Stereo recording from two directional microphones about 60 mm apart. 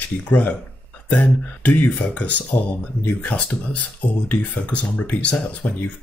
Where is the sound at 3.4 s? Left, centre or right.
Centre.